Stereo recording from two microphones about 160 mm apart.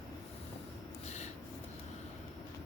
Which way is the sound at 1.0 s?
45° left (ahead or behind).